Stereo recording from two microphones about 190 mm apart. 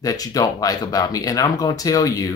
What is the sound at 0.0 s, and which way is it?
Speech, 20° left (ahead or behind).